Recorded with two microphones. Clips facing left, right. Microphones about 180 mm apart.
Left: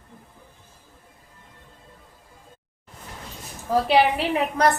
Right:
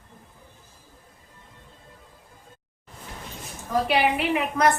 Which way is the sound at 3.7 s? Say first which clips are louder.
Left 3 dB; 30° left (ahead or behind).